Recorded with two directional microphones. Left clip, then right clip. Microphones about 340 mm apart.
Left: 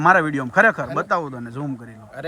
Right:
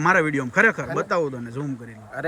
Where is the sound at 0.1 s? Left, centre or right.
Centre.